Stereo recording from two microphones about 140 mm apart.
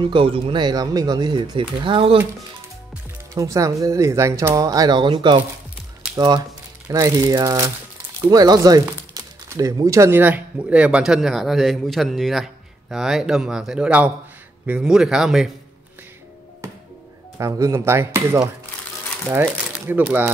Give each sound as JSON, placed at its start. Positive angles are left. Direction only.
{"t": 0.0, "sound": "speech", "side_deg": -40}
{"t": 3.3, "sound": "speech", "side_deg": -25}
{"t": 16.6, "sound": "music", "side_deg": -20}
{"t": 17.4, "sound": "speech", "side_deg": -20}